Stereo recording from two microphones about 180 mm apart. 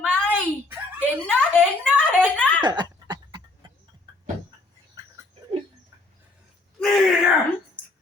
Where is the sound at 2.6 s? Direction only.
25° right (ahead or behind).